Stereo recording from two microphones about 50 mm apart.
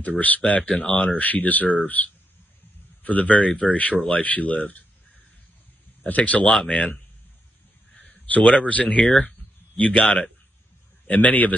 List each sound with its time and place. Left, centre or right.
0.0 s speech: left
1.1 s speech: left
6.0 s speech: left
6.5 s speech: centre
8.3 s speech: left
11.1 s speech: left